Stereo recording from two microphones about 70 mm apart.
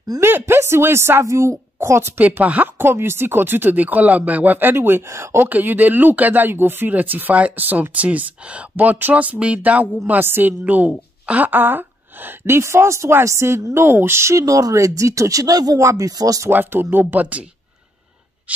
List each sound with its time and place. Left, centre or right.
0.2 s speech: right
2.8 s speech: right
5.5 s a woman's voice: right
16.4 s speech: right